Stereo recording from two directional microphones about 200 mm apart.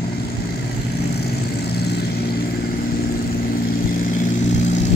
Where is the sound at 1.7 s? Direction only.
55° left (ahead or behind).